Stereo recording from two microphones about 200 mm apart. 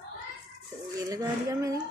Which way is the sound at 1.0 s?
15° right (ahead or behind).